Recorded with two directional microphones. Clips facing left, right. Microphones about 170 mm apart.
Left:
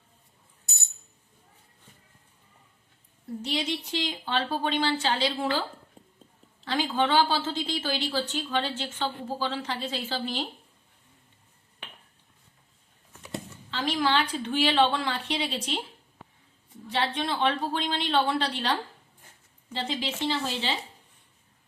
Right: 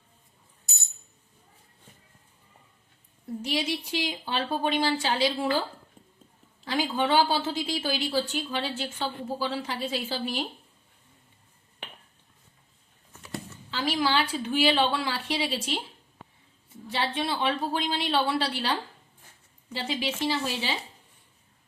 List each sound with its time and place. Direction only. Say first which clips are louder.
3.4 s a woman's voice: right 1 dB; 10° right (ahead or behind)
6.0 s a sound: left 2 dB; 30° left (ahead or behind)
6.7 s a woman's voice: even; 10° right (ahead or behind)
13.7 s a woman's voice: even; 5° right (ahead or behind)
16.9 s a woman's voice: left 1 dB; 5° right (ahead or behind)